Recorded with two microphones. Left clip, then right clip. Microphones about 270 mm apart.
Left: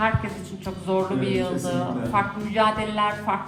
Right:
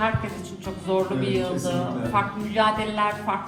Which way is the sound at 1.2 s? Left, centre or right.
Left.